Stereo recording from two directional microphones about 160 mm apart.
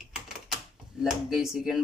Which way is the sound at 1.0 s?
Centre (ahead or behind).